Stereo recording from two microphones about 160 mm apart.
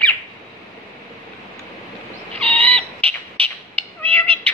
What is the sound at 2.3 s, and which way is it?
Owl, 35° right (ahead or behind).